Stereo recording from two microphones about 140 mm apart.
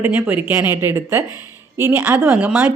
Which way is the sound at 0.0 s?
15° right (ahead or behind).